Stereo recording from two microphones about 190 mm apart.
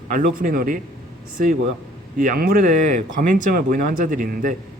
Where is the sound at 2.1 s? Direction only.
45° right (ahead or behind).